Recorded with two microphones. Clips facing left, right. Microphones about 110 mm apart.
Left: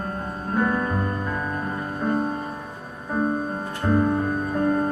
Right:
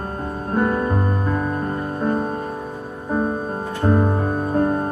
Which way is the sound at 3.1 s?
30° right (ahead or behind).